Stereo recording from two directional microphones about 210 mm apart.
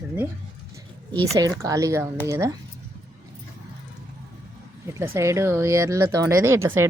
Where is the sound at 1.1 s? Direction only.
15° right (ahead or behind).